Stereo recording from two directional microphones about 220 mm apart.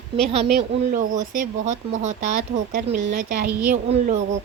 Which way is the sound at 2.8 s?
40° right (ahead or behind).